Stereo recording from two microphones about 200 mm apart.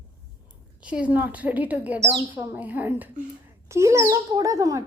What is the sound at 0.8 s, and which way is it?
A child's voice, 5° right (ahead or behind).